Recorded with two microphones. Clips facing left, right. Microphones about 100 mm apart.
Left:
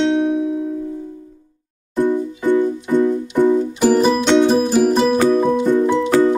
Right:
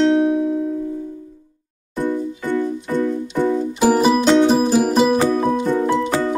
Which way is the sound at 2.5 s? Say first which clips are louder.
Left 5 dB; 15° left (ahead or behind).